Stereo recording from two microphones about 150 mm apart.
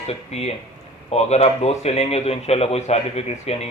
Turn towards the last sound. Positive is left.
turn(degrees=45)  # may be behind; listen again after turning